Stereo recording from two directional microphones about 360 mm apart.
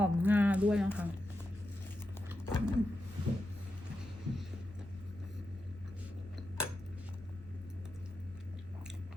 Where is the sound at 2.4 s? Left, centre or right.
Centre.